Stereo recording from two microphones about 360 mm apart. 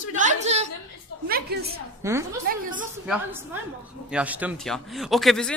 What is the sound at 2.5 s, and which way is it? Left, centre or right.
Speech, right.